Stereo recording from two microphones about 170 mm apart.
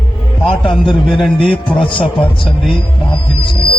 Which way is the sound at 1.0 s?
Centre (ahead or behind).